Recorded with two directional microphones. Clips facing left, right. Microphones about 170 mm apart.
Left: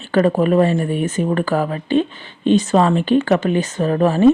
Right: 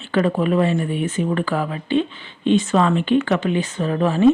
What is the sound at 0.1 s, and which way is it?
Speech, 40° left (ahead or behind).